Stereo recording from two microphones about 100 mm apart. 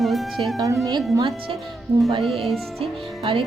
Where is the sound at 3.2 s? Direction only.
55° right (ahead or behind).